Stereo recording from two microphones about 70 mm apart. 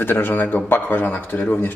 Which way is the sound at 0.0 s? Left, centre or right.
Left.